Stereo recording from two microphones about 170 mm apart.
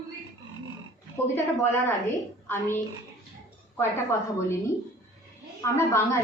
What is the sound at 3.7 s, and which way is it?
Speech, 15° left (ahead or behind).